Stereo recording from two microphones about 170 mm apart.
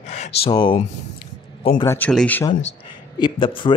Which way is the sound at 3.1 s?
25° left (ahead or behind).